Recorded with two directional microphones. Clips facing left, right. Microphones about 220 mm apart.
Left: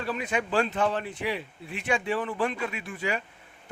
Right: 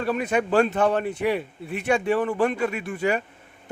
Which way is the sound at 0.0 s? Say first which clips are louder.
Right 6 dB; 50° right (ahead or behind).